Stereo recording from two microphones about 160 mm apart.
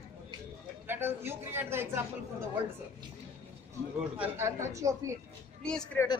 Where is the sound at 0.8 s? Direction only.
15° right (ahead or behind).